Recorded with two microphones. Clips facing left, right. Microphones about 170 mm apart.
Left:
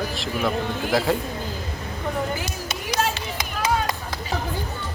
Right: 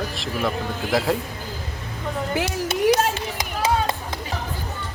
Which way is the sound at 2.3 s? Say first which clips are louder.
Right 6 dB; 75° right (ahead or behind).